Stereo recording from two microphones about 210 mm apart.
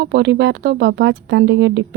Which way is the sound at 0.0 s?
55° right (ahead or behind).